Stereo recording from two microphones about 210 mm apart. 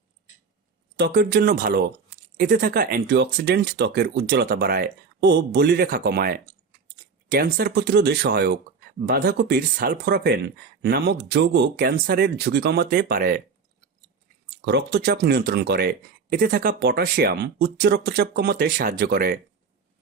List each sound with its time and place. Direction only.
0.9 s speech: 50° right (ahead or behind)
14.5 s speech: 55° right (ahead or behind)